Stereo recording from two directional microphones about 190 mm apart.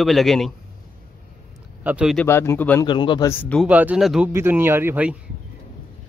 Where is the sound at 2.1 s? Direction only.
15° left (ahead or behind).